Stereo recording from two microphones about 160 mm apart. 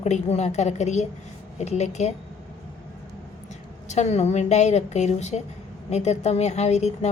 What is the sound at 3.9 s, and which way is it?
A woman's voice, 45° left (ahead or behind).